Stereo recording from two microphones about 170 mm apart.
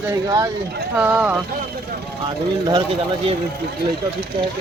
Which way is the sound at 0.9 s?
10° right (ahead or behind).